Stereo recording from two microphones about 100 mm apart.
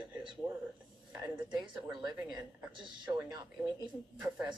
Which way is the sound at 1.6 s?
50° right (ahead or behind).